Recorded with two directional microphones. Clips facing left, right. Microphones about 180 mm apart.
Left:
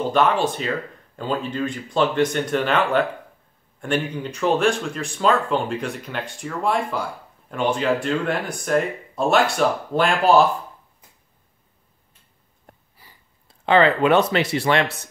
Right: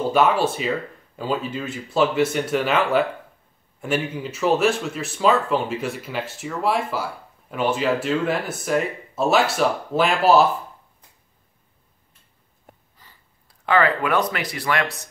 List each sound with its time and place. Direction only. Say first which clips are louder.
0.1 s speech: right 1 dB; 5° right (ahead or behind)
13.0 s a sound: left 2 dB; 10° left (ahead or behind)
13.5 s speech: left 3 dB; 25° left (ahead or behind)